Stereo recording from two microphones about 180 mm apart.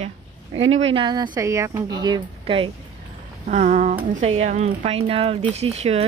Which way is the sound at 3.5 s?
40° right (ahead or behind).